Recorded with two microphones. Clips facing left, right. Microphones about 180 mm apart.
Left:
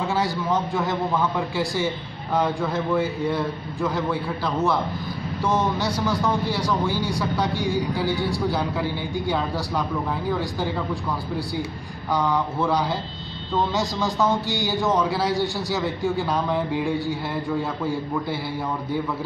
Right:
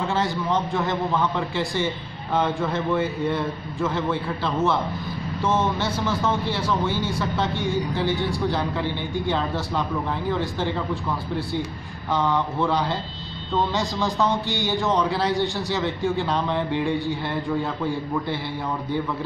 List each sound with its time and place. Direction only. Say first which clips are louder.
0.1 s a man's voice: even; centre (ahead or behind)
12.1 s a man's voice: even; centre (ahead or behind)